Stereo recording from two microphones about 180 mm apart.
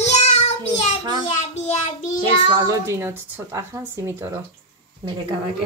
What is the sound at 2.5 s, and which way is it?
Speech, 20° right (ahead or behind).